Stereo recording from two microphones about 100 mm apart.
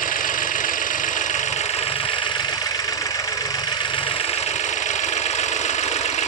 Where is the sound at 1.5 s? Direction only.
90° left.